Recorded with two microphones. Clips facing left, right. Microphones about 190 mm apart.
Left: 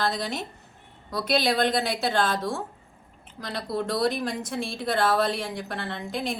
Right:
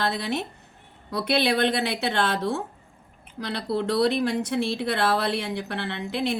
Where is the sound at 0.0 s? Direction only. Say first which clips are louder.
Right 1 dB; 60° right (ahead or behind).